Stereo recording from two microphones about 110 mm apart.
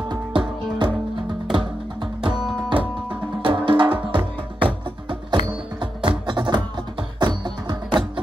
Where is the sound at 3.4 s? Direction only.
45° right (ahead or behind).